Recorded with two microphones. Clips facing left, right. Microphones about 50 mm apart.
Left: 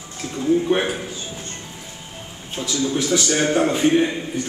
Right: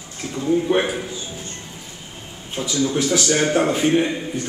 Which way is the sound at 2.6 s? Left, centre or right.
Centre.